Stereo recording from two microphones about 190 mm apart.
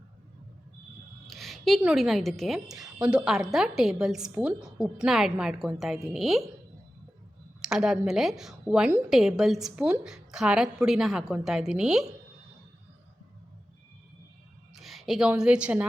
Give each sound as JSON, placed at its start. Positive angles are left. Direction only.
{"t": 1.3, "sound": "a woman's voice", "side_deg": 0}
{"t": 7.6, "sound": "a woman's voice", "side_deg": -5}
{"t": 14.8, "sound": "a woman's voice", "side_deg": 0}